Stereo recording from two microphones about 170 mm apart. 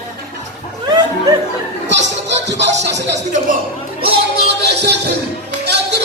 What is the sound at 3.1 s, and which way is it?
Music, 45° right (ahead or behind).